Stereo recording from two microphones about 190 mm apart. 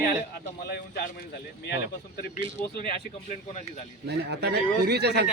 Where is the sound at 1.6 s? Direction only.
55° left (ahead or behind).